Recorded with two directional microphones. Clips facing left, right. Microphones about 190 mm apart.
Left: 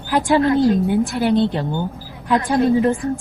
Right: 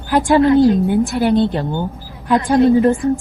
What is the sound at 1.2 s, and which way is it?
Speech, 50° right (ahead or behind).